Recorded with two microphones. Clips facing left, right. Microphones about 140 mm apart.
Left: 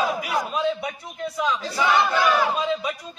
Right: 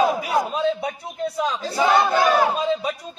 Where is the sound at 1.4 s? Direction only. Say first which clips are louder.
Right 2 dB; 35° right (ahead or behind).